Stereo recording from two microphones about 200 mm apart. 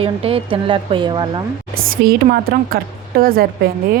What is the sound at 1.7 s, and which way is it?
A woman's voice, 50° right (ahead or behind).